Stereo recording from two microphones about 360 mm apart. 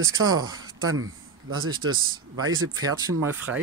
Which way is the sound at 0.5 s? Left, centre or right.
Right.